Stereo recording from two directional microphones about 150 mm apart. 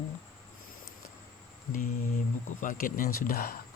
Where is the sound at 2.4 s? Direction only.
65° left (ahead or behind); by 3.6 s 80° left.